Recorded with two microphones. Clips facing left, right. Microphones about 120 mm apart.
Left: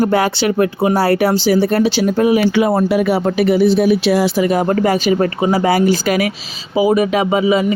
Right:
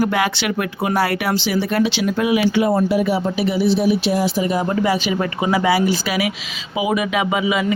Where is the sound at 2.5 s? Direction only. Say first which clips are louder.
Left 3 dB; 80° left; by 7.6 s 35° left (ahead or behind).